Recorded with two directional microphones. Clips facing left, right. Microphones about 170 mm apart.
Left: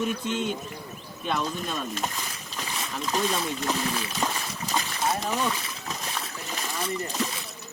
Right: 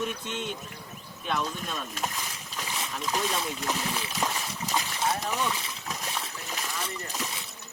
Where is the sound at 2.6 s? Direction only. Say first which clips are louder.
Left 1 dB; 10° right (ahead or behind).